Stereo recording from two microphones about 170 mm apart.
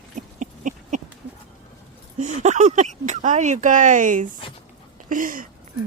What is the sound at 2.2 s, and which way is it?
Speech, 45° right (ahead or behind).